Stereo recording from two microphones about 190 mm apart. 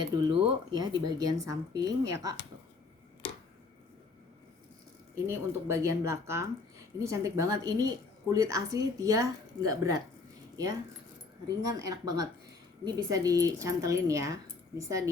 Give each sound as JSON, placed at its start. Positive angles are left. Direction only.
{"t": 0.0, "sound": "speech", "side_deg": -20}
{"t": 5.3, "sound": "a woman's voice", "side_deg": -15}
{"t": 11.4, "sound": "a woman's voice", "side_deg": -20}